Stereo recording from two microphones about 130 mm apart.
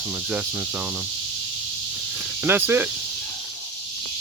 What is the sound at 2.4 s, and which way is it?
Speech, 15° right (ahead or behind).